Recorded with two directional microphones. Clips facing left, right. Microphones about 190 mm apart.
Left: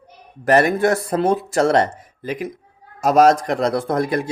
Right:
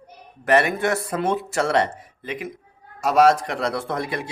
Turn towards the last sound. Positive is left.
turn(degrees=45)  # may be behind; listen again after turning